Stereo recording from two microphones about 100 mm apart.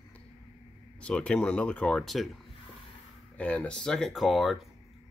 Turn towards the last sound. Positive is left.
turn(degrees=0)  # may be behind; listen again after turning